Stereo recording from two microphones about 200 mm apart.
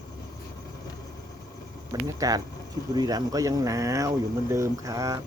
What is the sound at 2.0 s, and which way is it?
Speech, 15° right (ahead or behind).